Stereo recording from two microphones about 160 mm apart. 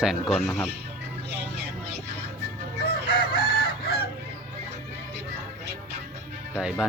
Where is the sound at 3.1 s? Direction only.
80° left.